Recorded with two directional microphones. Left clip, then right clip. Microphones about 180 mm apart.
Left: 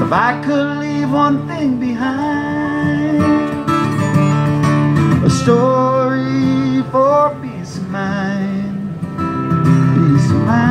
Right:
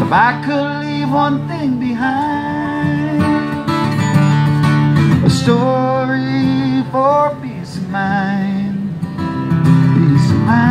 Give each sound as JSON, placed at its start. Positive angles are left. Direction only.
{"t": 0.1, "sound": "music", "side_deg": -20}
{"t": 2.8, "sound": "music", "side_deg": -20}
{"t": 9.6, "sound": "music", "side_deg": -20}